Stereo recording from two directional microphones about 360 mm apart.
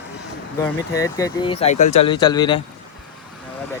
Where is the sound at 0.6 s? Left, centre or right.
Centre.